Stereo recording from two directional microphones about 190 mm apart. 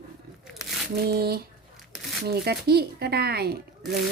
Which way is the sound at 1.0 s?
55° right (ahead or behind).